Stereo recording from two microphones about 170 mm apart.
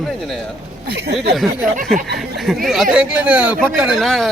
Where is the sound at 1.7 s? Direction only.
50° right (ahead or behind).